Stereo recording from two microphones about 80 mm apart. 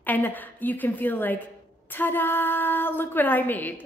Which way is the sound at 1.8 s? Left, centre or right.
Left.